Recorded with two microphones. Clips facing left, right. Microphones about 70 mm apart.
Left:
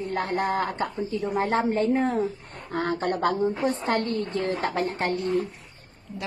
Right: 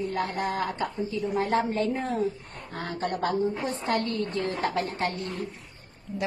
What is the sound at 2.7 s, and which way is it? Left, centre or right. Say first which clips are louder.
A woman's voice: left 5 dB; left.